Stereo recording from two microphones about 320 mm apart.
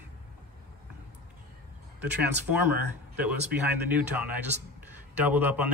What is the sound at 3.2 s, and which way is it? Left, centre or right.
Speech, centre.